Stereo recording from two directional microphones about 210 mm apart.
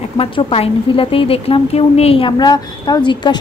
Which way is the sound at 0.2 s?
25° left (ahead or behind).